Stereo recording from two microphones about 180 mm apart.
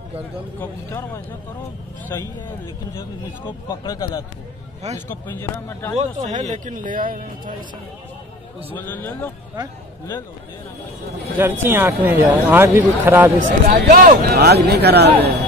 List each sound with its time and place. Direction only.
0.6 s speech: 15° left (ahead or behind)
3.4 s speech: 20° left (ahead or behind)
5.9 s speech: 40° right (ahead or behind)
8.7 s speech: 10° left (ahead or behind)
11.4 s speech: 10° right (ahead or behind)
13.4 s speech: 45° right (ahead or behind); by 15.0 s 65° right (ahead or behind)